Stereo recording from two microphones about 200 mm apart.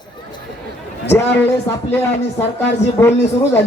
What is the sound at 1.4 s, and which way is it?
Speech, 10° left (ahead or behind).